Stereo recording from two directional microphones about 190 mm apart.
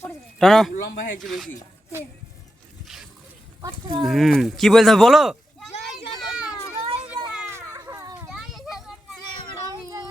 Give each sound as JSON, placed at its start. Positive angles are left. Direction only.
{"t": 0.3, "sound": "speech", "side_deg": 0}
{"t": 3.6, "sound": "speech", "side_deg": -20}
{"t": 4.0, "sound": "speech", "side_deg": 0}
{"t": 6.1, "sound": "children playing", "side_deg": -5}
{"t": 6.7, "sound": "a sound", "side_deg": -30}
{"t": 7.3, "sound": "children playing", "side_deg": -10}
{"t": 8.3, "sound": "children playing", "side_deg": 0}